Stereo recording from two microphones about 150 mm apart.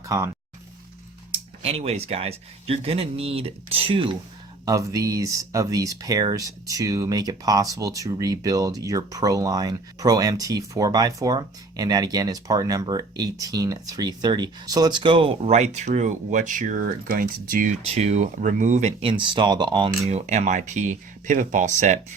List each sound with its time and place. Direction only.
0.1 s speech: 20° right (ahead or behind)
1.3 s speech: 40° right (ahead or behind)
4.6 s speech: 25° right (ahead or behind); by 17.7 s 65° right (ahead or behind)
17.8 s speech: 45° right (ahead or behind)
20.1 s speech: 45° right (ahead or behind)